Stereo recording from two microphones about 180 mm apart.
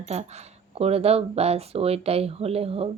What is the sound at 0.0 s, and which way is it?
Speech, 40° right (ahead or behind).